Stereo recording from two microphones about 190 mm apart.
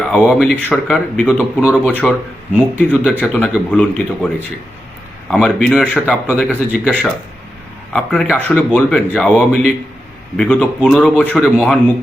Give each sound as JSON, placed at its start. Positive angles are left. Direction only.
{"t": 0.0, "sound": "speech", "side_deg": 0}
{"t": 5.3, "sound": "speech", "side_deg": 0}